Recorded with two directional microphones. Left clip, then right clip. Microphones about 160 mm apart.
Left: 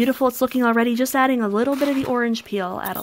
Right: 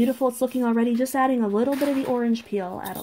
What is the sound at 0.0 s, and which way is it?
Speech, 50° left (ahead or behind).